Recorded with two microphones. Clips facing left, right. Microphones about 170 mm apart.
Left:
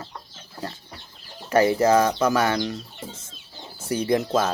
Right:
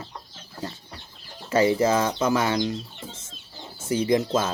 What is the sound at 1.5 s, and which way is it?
Speech, 25° right (ahead or behind).